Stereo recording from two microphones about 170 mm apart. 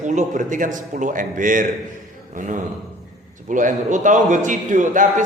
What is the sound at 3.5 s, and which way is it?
A man's voice, 50° right (ahead or behind).